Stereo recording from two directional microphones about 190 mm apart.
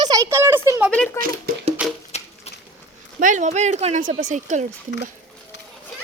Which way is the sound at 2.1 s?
35° left (ahead or behind).